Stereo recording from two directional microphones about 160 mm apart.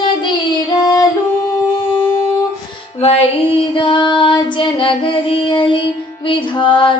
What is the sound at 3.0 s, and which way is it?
Child singing, 35° left (ahead or behind).